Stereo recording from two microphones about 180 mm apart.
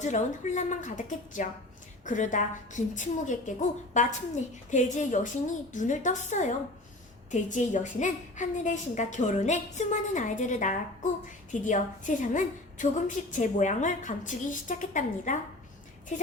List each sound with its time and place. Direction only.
0.0 s a woman's voice: 40° left (ahead or behind)